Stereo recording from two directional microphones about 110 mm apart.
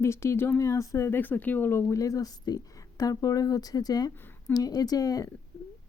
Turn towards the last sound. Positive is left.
turn(degrees=35)  # may be behind; listen again after turning